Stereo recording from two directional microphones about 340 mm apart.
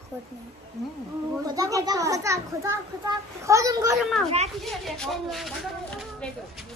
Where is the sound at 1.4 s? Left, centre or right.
Centre.